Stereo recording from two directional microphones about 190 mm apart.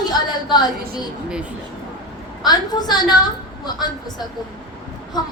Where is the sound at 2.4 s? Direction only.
20° left (ahead or behind).